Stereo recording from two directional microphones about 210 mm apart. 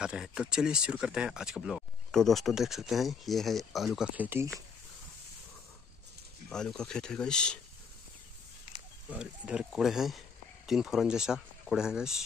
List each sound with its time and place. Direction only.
0.0 s speech: 5° right (ahead or behind)
6.5 s speech: 5° left (ahead or behind)
9.1 s speech: 5° right (ahead or behind)